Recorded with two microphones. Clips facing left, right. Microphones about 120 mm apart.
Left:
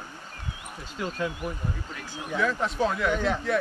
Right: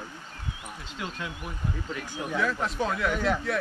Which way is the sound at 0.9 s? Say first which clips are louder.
Left 6 dB; 45° left (ahead or behind).